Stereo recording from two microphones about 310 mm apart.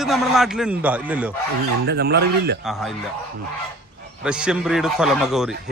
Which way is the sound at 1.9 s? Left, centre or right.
Right.